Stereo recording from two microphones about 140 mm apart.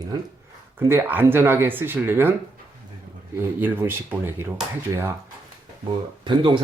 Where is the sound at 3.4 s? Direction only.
15° right (ahead or behind).